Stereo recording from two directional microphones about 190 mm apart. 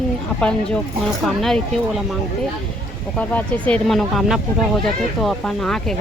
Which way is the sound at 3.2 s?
5° left (ahead or behind).